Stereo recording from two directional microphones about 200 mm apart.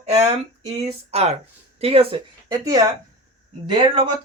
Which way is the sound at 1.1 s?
30° right (ahead or behind).